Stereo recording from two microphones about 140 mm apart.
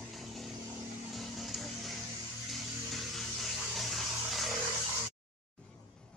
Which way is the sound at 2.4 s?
Centre (ahead or behind).